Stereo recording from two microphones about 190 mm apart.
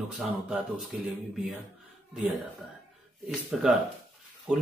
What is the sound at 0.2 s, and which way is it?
Speech, 5° right (ahead or behind).